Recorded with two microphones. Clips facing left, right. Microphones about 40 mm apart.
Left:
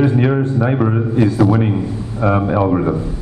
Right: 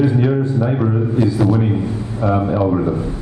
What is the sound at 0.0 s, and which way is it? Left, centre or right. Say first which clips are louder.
A man's voice: left 1 dB; left.